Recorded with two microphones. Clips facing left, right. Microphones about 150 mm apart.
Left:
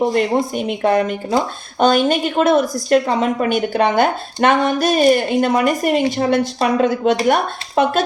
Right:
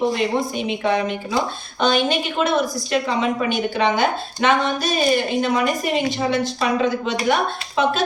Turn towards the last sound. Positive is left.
turn(degrees=55)  # may be behind; listen again after turning